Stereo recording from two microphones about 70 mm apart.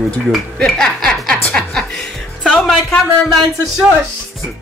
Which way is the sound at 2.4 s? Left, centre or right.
Centre.